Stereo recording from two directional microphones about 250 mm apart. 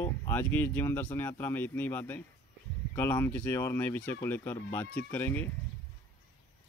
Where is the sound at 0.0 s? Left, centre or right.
Centre.